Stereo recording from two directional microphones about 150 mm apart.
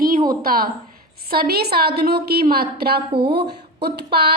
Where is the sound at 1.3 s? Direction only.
90° right.